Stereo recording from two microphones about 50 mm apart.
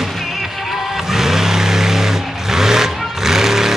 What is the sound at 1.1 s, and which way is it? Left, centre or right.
Vehicle, centre.